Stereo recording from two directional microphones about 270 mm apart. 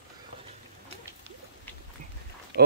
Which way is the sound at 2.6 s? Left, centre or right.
Right.